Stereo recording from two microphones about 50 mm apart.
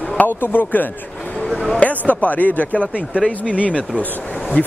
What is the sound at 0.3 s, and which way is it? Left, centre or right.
Speech, left.